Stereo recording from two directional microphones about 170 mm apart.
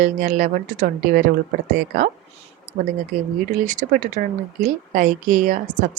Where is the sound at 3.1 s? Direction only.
50° right (ahead or behind).